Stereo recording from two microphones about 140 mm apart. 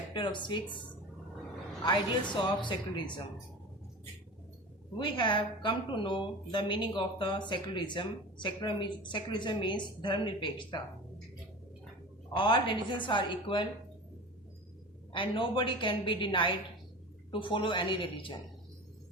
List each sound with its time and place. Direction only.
0.1 s speech: 35° left (ahead or behind)
2.2 s a woman's voice: 35° left (ahead or behind)
4.9 s a woman's voice: 35° left (ahead or behind)
12.3 s a woman's voice: 35° left (ahead or behind)
15.1 s a woman's voice: 35° left (ahead or behind)